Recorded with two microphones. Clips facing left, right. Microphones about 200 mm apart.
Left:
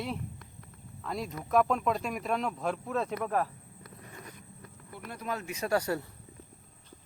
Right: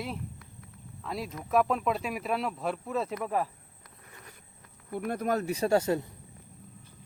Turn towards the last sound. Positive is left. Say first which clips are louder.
# right 4 dB
turn(degrees=-20)  # may be behind; listen again after turning